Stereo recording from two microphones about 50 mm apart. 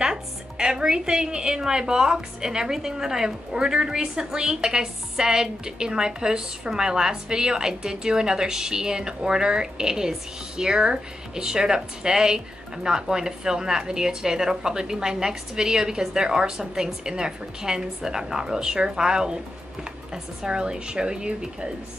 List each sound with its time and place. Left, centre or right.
0.0 s a woman's voice: centre
20.4 s a woman's voice: centre